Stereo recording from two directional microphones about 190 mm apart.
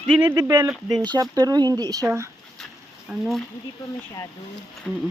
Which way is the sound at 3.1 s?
Centre (ahead or behind).